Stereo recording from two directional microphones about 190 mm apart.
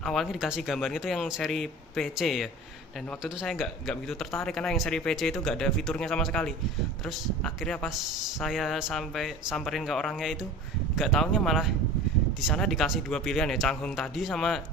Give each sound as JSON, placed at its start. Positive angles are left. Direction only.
{"t": 0.0, "sound": "speech", "side_deg": 0}